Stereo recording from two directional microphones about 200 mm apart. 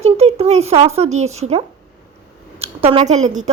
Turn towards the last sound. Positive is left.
turn(degrees=-35)  # may be behind; listen again after turning